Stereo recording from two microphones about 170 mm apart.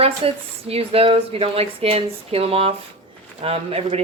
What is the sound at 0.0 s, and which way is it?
A woman's voice, 35° right (ahead or behind).